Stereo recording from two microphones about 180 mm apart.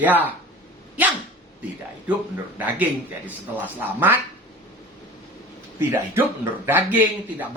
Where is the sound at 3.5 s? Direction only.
10° right (ahead or behind).